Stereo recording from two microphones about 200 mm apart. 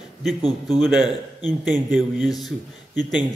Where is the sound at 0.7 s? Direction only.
Centre (ahead or behind).